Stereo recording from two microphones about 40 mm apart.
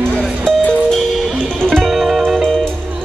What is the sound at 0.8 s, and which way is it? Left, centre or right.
Music, centre.